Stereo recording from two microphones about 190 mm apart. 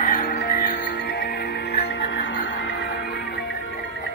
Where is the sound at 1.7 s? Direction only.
65° left (ahead or behind).